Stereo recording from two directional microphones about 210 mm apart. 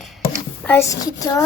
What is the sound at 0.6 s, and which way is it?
Speech, 15° left (ahead or behind).